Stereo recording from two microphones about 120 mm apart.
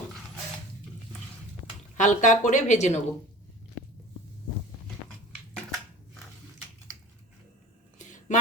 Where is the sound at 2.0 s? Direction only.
90° left; by 3.0 s 70° left (ahead or behind).